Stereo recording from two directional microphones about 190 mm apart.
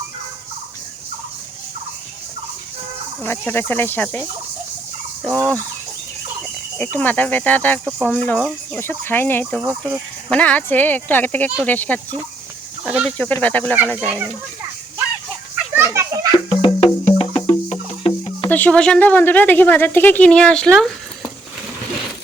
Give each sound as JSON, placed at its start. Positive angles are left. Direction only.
{"t": 3.2, "sound": "a woman's voice", "side_deg": 10}
{"t": 6.4, "sound": "a woman's voice", "side_deg": 10}
{"t": 9.6, "sound": "speech", "side_deg": -10}
{"t": 10.2, "sound": "a woman's voice", "side_deg": 5}
{"t": 15.7, "sound": "children playing", "side_deg": -15}
{"t": 16.6, "sound": "music", "side_deg": 25}
{"t": 18.4, "sound": "a woman's voice", "side_deg": 10}